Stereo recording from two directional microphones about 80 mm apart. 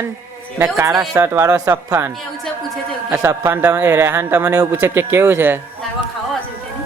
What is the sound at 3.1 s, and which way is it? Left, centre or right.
A man's voice, right.